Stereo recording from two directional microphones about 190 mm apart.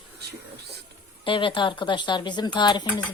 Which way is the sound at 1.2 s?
25° left (ahead or behind).